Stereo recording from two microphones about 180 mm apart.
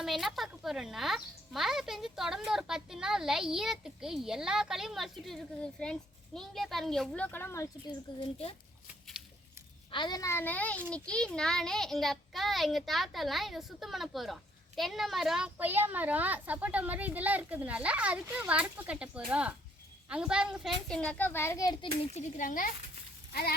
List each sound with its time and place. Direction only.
0.0 s speech: centre (ahead or behind); by 7.9 s 15° left (ahead or behind)
9.9 s a woman's voice: 25° left (ahead or behind)
22.1 s a child's voice: 45° left (ahead or behind)
23.3 s speech: 60° left (ahead or behind)